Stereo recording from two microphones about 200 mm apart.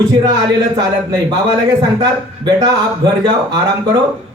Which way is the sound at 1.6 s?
20° right (ahead or behind).